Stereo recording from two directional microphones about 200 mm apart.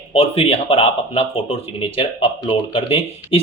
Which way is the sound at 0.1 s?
30° left (ahead or behind).